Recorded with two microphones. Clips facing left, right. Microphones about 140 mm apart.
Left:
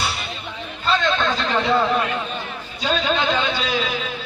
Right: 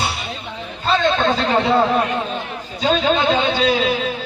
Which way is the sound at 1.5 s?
30° right (ahead or behind).